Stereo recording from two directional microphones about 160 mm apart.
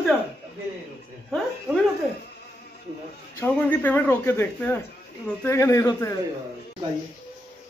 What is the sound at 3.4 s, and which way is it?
Speech, 10° left (ahead or behind).